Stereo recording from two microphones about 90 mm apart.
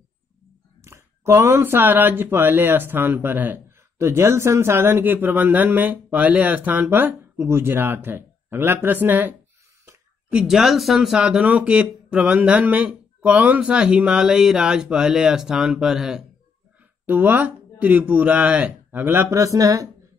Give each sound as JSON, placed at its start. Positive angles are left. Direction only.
{"t": 0.8, "sound": "speech", "side_deg": -30}
{"t": 10.3, "sound": "speech", "side_deg": -5}
{"t": 17.0, "sound": "speech", "side_deg": -20}
{"t": 19.3, "sound": "speech", "side_deg": -40}